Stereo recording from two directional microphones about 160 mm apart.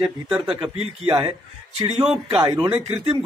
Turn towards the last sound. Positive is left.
turn(degrees=-35)  # may be behind; listen again after turning